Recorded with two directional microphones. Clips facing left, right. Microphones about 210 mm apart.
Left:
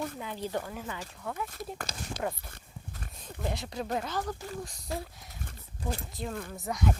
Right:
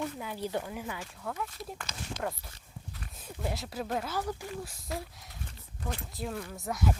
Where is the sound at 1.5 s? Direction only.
35° left (ahead or behind).